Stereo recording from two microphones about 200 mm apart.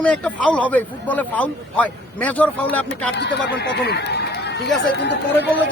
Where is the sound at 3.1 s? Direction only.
55° left (ahead or behind).